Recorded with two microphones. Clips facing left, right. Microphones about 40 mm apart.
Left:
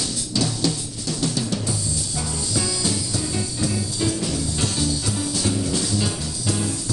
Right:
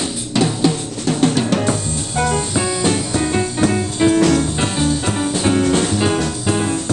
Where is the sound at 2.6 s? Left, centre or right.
Right.